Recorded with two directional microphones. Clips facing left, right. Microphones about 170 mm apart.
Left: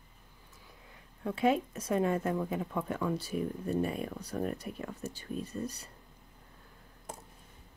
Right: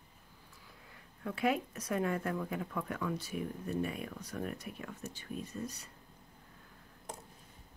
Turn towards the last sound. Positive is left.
turn(degrees=35)  # may be behind; listen again after turning